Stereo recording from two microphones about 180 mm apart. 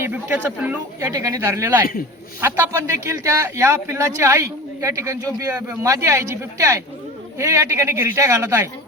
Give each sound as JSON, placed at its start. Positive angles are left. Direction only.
{"t": 0.0, "sound": "a man's voice", "side_deg": -10}